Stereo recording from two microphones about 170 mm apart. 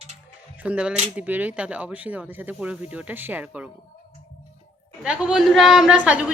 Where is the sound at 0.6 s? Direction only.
5° right (ahead or behind).